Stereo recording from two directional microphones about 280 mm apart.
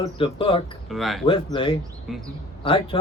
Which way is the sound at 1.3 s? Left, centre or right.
Centre.